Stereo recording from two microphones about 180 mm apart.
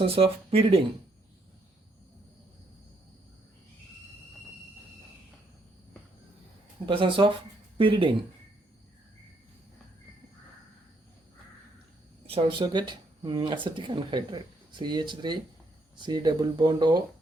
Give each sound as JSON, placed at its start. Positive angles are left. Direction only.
{"t": 0.2, "sound": "speech", "side_deg": -30}
{"t": 6.8, "sound": "speech", "side_deg": -30}
{"t": 12.2, "sound": "speech", "side_deg": -30}